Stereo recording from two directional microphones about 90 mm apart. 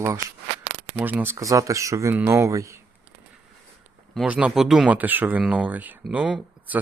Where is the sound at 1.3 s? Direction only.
35° right (ahead or behind).